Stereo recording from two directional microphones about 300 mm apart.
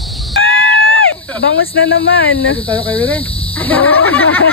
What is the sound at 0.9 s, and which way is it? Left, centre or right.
Speech, left.